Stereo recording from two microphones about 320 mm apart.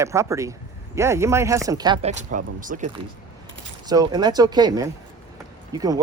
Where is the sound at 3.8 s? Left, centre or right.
Centre.